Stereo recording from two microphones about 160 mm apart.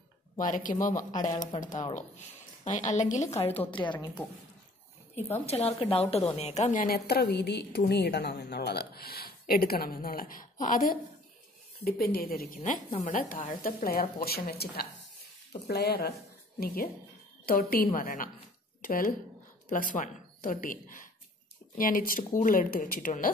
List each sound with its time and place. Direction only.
0.4 s speech: 55° left (ahead or behind)
3.7 s speech: 30° left (ahead or behind)
5.5 s a woman's voice: 40° left (ahead or behind); by 11.0 s 55° left (ahead or behind)
11.8 s a woman's voice: 70° left (ahead or behind)
12.5 s a woman's voice: 45° left (ahead or behind); by 14.9 s 75° left (ahead or behind)
15.6 s speech: 85° left
16.5 s a woman's voice: 70° left (ahead or behind)